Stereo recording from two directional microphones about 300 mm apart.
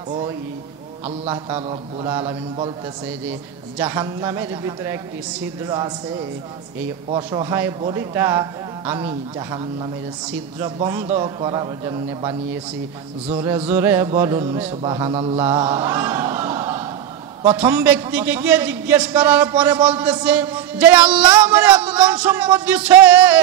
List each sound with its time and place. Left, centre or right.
1.0 s a man's voice: centre
1.5 s music: centre
3.7 s music: centre
7.1 s music: centre
17.4 s a man's voice: centre